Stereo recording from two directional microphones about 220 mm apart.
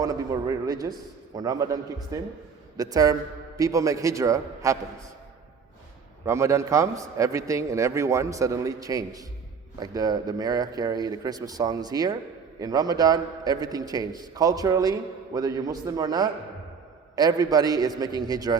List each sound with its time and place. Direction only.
0.0 s a man's voice: 15° right (ahead or behind)
6.2 s a man's voice: 10° right (ahead or behind)